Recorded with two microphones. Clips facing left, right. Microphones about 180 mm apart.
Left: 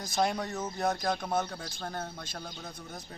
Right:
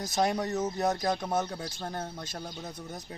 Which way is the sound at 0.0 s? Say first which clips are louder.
Right 2 dB; 40° right (ahead or behind).